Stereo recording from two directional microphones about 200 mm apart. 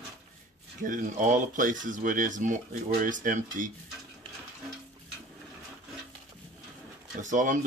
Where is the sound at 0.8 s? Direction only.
40° right (ahead or behind).